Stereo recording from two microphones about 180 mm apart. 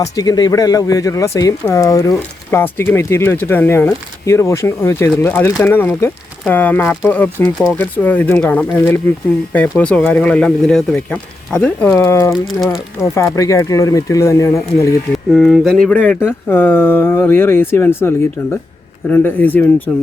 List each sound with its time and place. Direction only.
0.0 s speech: 20° left (ahead or behind)
12.3 s speech: centre (ahead or behind)
13.1 s speech: 15° left (ahead or behind)
15.3 s speech: centre (ahead or behind)
19.1 s speech: 10° left (ahead or behind)